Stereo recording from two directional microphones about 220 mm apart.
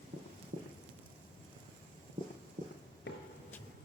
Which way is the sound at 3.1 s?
55° left (ahead or behind).